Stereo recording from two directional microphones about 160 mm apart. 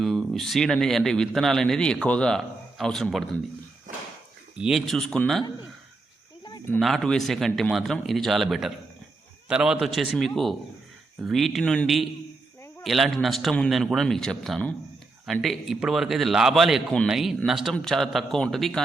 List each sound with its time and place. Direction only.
0.0 s a man's voice: centre (ahead or behind)
4.5 s a man's voice: 5° right (ahead or behind)
6.7 s a man's voice: centre (ahead or behind)